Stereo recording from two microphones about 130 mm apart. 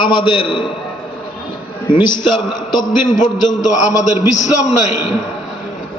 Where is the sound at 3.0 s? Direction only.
75° left (ahead or behind).